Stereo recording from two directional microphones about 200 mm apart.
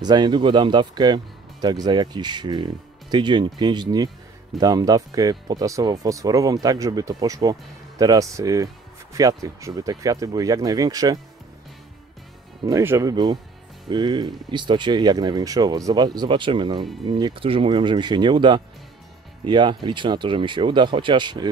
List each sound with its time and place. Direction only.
0.0 s speech: 20° right (ahead or behind)
12.6 s speech: 15° right (ahead or behind)